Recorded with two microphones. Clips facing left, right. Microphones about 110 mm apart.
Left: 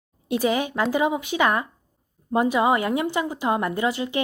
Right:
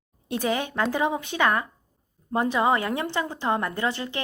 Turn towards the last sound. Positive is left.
turn(degrees=15)  # may be behind; listen again after turning